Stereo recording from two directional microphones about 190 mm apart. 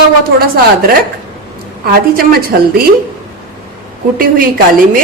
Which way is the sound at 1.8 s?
50° right (ahead or behind).